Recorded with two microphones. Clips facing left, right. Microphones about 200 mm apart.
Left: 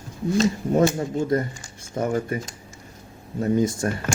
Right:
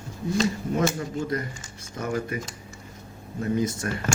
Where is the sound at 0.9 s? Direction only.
30° left (ahead or behind).